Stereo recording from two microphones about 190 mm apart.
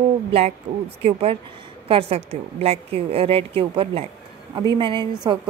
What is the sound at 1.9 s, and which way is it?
A woman's voice, 30° right (ahead or behind).